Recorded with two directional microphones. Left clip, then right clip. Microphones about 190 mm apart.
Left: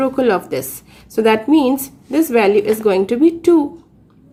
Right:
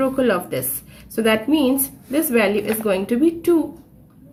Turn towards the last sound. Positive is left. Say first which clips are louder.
# left 5 dB
turn(degrees=35)  # may be behind; listen again after turning